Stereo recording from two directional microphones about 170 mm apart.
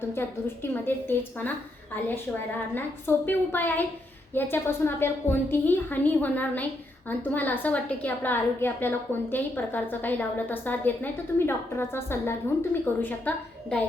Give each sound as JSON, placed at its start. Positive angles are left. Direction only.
{"t": 0.1, "sound": "a woman's voice", "side_deg": 15}
{"t": 2.7, "sound": "a woman's voice", "side_deg": 10}